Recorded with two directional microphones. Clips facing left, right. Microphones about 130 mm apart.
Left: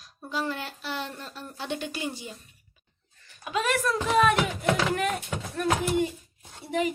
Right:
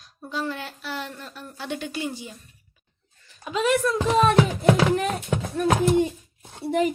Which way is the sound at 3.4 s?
20° right (ahead or behind).